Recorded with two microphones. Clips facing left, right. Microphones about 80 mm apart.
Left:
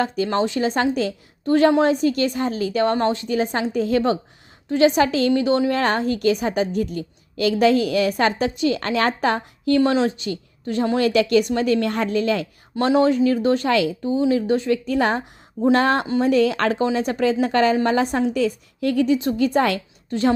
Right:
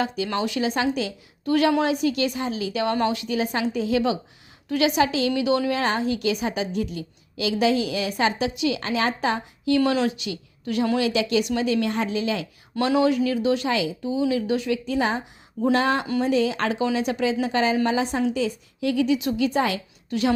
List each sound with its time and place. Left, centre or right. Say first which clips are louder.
0.3 s a woman's voice: left 4 dB; left
2.9 s a woman's voice: left 3 dB; left
5.7 s a woman's voice: left 3 dB; left
11.0 s a woman's voice: left 5 dB; left
13.0 s a woman's voice: left 4 dB; left
13.7 s speech: left 5 dB; left
14.0 s a woman's voice: left 4 dB; left
16.8 s a woman's voice: left 2 dB; left
19.5 s speech: left 4 dB; left
20.1 s speech: left 3 dB; left